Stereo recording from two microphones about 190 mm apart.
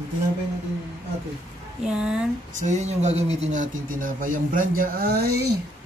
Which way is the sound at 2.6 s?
35° right (ahead or behind).